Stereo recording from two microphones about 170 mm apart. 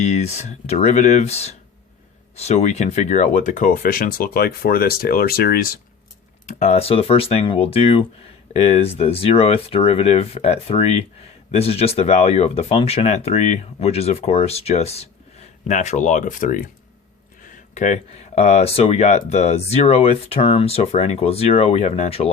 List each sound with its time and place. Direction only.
0.0 s speech: 40° left (ahead or behind); by 5.7 s 60° left (ahead or behind)
6.6 s speech: 40° left (ahead or behind)